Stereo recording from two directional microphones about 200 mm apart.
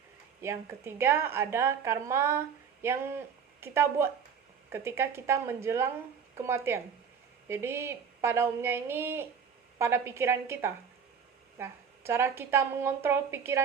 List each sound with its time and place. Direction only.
0.4 s a woman's voice: 10° right (ahead or behind)